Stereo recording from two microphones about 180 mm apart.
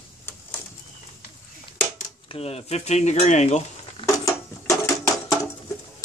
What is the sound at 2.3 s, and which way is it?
Speech, 35° left (ahead or behind).